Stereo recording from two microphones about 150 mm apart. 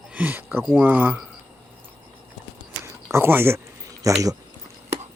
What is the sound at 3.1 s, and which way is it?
Speech, 15° right (ahead or behind).